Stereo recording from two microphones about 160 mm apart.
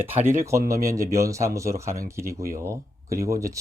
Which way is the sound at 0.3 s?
15° right (ahead or behind).